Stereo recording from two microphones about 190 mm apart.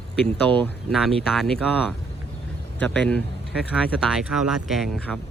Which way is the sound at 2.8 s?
5° left (ahead or behind).